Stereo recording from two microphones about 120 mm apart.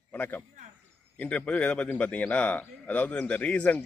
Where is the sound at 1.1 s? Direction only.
10° left (ahead or behind).